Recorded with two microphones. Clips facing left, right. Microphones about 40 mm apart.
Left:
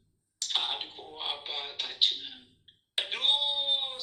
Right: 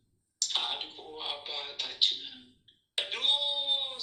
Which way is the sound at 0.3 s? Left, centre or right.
Left.